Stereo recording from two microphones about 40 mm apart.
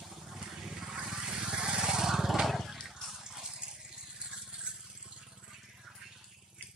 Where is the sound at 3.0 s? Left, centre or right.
Centre.